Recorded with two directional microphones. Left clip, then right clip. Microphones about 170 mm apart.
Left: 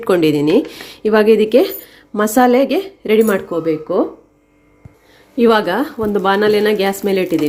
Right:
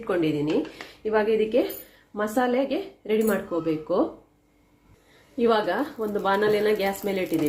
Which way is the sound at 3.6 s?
25° left (ahead or behind).